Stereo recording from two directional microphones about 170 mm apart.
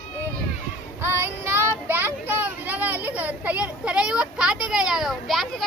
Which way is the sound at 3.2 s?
10° right (ahead or behind).